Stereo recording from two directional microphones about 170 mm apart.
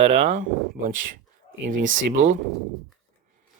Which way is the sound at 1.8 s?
90° right.